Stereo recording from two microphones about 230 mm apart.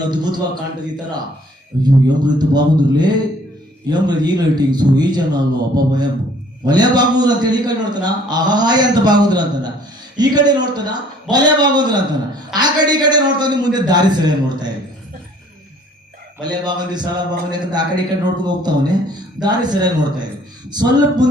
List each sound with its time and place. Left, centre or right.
0.0 s a man's voice: centre
1.8 s a man's voice: centre
16.4 s a man's voice: centre